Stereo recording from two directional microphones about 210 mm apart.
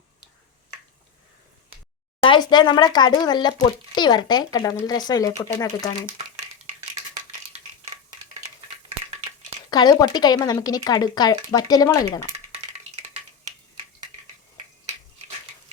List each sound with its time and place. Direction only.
2.2 s speech: 20° left (ahead or behind)
9.6 s speech: 20° left (ahead or behind)